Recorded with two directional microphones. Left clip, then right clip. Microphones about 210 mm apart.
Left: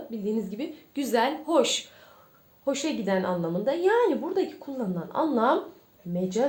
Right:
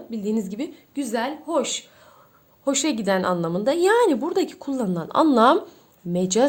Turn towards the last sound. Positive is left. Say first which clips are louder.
# right 7 dB
turn(degrees=-45)  # may be behind; listen again after turning